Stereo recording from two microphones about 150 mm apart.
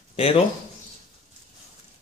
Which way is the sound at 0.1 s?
40° left (ahead or behind).